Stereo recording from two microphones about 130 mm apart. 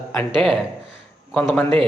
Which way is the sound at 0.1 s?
5° left (ahead or behind).